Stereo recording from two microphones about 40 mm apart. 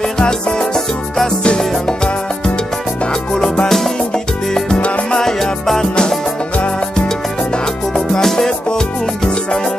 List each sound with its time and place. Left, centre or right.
0.2 s music: centre
0.7 s music: centre
3.6 s music: centre
4.7 s music: left
5.2 s music: centre
8.1 s music: centre